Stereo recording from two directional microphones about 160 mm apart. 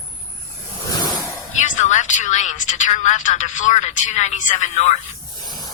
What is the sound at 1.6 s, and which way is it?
Speech, 50° left (ahead or behind).